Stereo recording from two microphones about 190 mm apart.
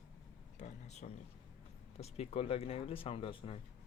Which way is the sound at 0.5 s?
40° left (ahead or behind).